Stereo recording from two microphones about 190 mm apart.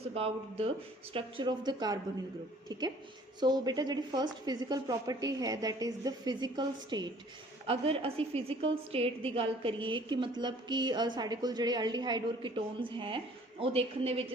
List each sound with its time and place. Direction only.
0.1 s a woman's voice: 30° right (ahead or behind)
3.4 s a woman's voice: 20° right (ahead or behind)